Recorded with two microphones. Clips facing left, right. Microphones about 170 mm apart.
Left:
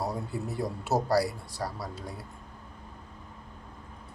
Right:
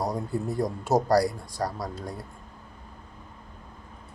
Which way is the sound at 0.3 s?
5° left (ahead or behind).